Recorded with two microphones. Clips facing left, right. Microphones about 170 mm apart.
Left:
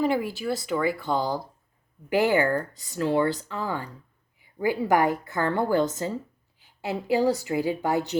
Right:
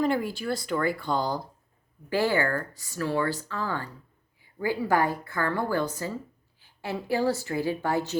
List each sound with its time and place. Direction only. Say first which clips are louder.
0.0 s speech: left 1 dB; 5° left (ahead or behind)
2.0 s a woman's voice: left 3 dB; 15° left (ahead or behind)